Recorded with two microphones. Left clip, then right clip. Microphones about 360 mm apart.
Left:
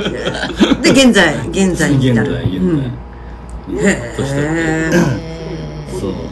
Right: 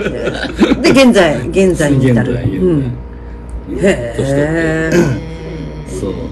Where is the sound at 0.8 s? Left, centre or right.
Centre.